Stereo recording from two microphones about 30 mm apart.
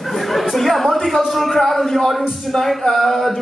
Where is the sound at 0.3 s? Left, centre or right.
Centre.